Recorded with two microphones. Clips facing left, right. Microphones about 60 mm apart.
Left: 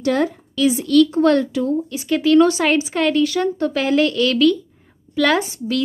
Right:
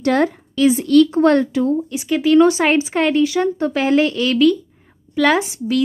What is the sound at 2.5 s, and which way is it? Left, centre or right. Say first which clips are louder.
A woman's voice: right 2 dB; right.